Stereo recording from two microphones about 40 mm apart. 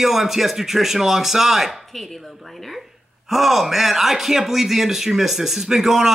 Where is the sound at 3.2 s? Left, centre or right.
Centre.